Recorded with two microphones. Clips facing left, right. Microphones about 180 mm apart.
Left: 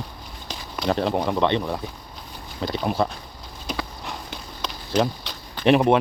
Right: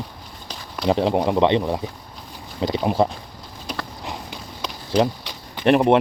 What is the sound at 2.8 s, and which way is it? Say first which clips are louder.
Speech: right 4 dB; 20° right (ahead or behind).